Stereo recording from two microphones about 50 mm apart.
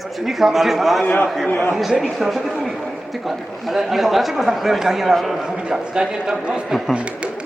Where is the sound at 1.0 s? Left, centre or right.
Left.